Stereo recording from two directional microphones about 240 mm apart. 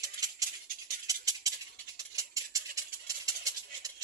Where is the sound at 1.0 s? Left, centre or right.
Centre.